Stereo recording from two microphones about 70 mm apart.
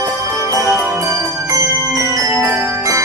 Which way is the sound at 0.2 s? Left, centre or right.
Right.